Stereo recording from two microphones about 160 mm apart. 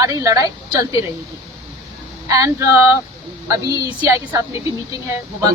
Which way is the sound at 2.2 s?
20° right (ahead or behind).